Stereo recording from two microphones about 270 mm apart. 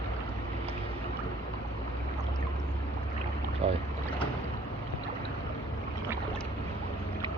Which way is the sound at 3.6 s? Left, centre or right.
Right.